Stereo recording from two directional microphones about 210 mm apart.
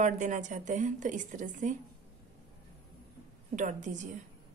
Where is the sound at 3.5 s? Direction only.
35° right (ahead or behind).